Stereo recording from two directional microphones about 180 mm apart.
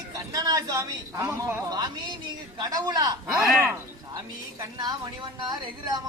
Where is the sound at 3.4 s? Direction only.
Centre (ahead or behind).